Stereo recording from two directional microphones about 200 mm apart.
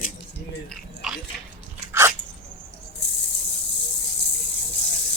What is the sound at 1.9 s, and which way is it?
Dog, 15° right (ahead or behind).